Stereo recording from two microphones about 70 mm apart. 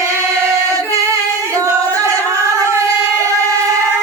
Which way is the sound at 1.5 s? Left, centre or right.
Right.